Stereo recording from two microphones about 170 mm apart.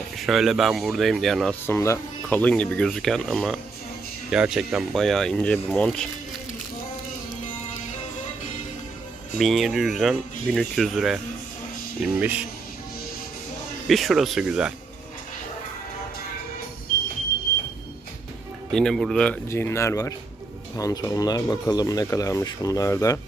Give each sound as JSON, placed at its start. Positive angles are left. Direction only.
{"t": 0.2, "sound": "speech", "side_deg": 0}
{"t": 1.6, "sound": "speech", "side_deg": 15}
{"t": 9.4, "sound": "speech", "side_deg": 0}
{"t": 13.8, "sound": "speech", "side_deg": 0}
{"t": 18.7, "sound": "speech", "side_deg": 5}